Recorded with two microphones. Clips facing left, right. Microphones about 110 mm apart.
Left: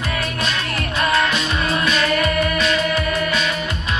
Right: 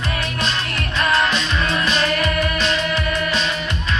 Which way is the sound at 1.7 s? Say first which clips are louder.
Left 2 dB; 30° right (ahead or behind).